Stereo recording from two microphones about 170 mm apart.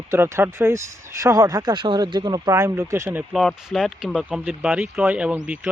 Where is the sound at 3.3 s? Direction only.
Centre (ahead or behind).